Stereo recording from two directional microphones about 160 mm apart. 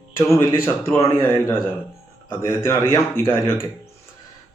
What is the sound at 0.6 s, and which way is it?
Speech, 15° left (ahead or behind).